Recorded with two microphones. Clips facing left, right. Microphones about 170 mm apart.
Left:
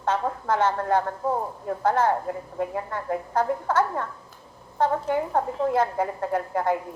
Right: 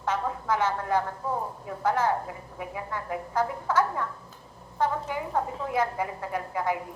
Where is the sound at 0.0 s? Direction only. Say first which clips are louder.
Left 3 dB; 55° left (ahead or behind).